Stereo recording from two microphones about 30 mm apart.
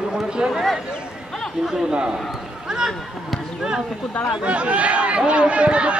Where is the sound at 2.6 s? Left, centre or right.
Right.